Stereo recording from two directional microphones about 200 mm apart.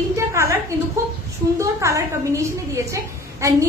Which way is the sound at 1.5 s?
15° right (ahead or behind).